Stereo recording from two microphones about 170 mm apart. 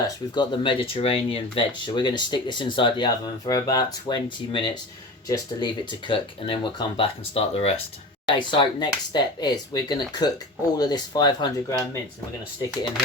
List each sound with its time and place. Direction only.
0.3 s speech: 25° left (ahead or behind)
8.3 s speech: 25° left (ahead or behind)